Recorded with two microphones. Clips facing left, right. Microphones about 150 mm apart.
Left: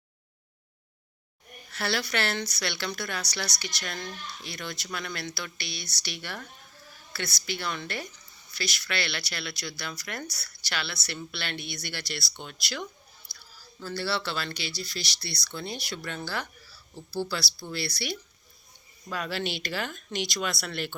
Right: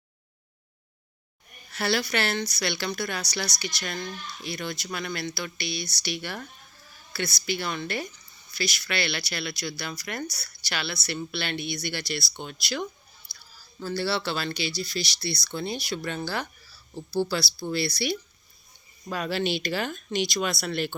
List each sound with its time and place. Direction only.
1.7 s a woman's voice: 10° right (ahead or behind)
13.3 s chewing: 15° left (ahead or behind)
13.8 s speech: 20° right (ahead or behind)